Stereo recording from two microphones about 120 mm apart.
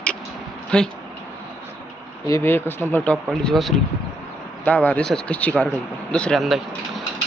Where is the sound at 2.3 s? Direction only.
20° left (ahead or behind).